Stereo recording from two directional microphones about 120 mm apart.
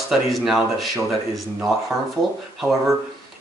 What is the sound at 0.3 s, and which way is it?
Speech, centre (ahead or behind).